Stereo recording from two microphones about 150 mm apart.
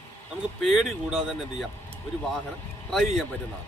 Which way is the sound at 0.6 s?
Centre (ahead or behind).